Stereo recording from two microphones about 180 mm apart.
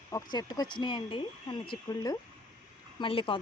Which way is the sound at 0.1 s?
20° left (ahead or behind).